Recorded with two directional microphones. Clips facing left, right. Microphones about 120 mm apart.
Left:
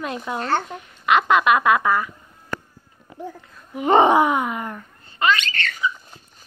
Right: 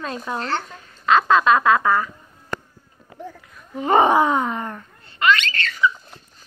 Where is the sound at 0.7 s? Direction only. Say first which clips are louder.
Right 5 dB; 20° left (ahead or behind).